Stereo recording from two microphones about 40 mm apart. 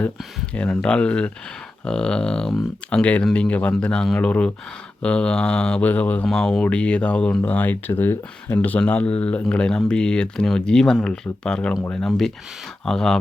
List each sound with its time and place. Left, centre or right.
0.5 s speech: left
5.8 s speech: left
6.3 s speech: centre
6.7 s speech: left
7.4 s speech: left
8.9 s speech: left
12.0 s speech: centre
12.8 s speech: centre